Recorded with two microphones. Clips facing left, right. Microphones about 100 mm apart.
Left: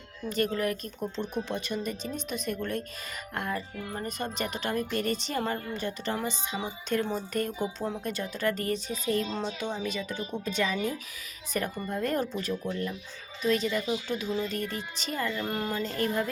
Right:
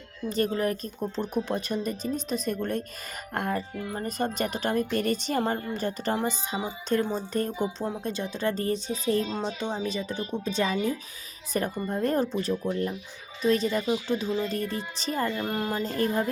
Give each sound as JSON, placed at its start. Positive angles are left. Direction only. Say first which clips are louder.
{"t": 0.3, "sound": "speech", "louder": "right 2 dB", "side_deg": -35}
{"t": 3.3, "sound": "music", "louder": "right 4 dB", "side_deg": -45}
{"t": 4.0, "sound": "a woman's voice", "louder": "right 5 dB", "side_deg": -40}
{"t": 15.4, "sound": "speech", "louder": "right 2 dB", "side_deg": -15}
{"t": 15.7, "sound": "speech", "louder": "right 3 dB", "side_deg": -35}